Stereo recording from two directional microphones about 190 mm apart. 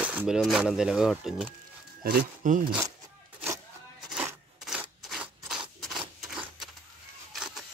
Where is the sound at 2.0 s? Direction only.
50° right (ahead or behind).